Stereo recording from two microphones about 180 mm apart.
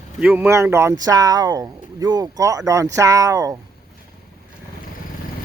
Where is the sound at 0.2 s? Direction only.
5° right (ahead or behind).